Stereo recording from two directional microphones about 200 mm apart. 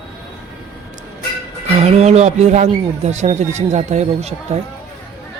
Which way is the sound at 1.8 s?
35° right (ahead or behind).